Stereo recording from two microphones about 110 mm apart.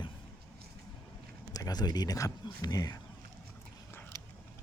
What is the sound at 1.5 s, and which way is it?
Speech, 35° left (ahead or behind).